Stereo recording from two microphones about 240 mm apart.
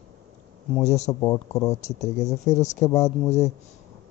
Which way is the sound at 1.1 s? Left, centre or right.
Centre.